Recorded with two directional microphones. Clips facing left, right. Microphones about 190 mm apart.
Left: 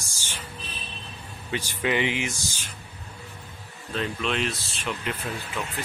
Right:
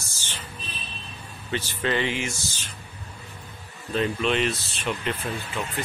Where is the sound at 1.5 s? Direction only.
15° left (ahead or behind).